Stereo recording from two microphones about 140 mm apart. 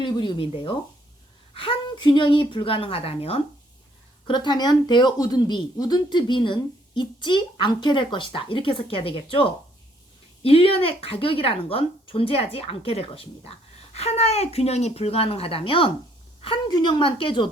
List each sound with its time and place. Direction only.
0.0 s speech: 35° left (ahead or behind)
4.3 s a woman's voice: 35° left (ahead or behind)